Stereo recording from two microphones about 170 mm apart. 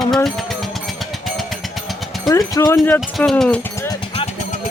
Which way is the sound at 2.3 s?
20° left (ahead or behind).